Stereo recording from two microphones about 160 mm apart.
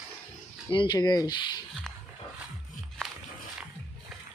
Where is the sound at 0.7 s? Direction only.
30° left (ahead or behind).